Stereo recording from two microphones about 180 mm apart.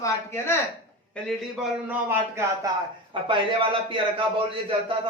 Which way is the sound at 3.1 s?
25° right (ahead or behind).